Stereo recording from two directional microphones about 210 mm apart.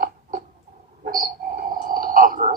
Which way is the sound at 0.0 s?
45° right (ahead or behind).